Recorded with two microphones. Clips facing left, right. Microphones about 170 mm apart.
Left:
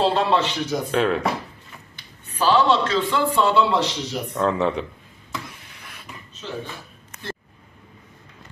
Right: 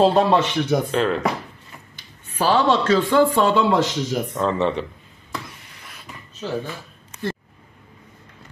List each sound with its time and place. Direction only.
0.0 s a man's voice: 45° right (ahead or behind)
0.9 s speech: centre (ahead or behind)
2.3 s a man's voice: 45° right (ahead or behind)
4.4 s speech: centre (ahead or behind)
5.3 s a sound: centre (ahead or behind)